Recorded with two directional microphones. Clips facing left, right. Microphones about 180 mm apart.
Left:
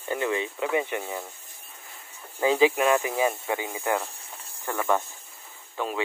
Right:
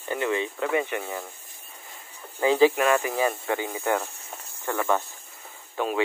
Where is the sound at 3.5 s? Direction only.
15° left (ahead or behind).